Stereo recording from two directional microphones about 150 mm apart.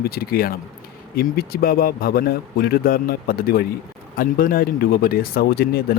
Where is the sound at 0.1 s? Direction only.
90° left.